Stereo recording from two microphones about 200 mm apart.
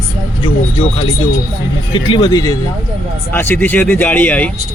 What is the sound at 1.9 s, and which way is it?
A man's voice, 25° left (ahead or behind).